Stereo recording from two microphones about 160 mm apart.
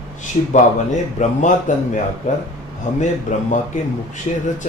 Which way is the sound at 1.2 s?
50° left (ahead or behind).